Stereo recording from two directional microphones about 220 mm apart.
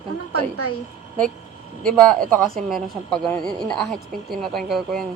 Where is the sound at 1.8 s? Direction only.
5° left (ahead or behind).